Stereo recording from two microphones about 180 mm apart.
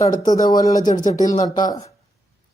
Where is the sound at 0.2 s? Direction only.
20° left (ahead or behind).